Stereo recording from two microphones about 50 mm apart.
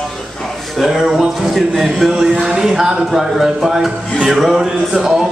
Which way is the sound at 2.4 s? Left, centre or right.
Centre.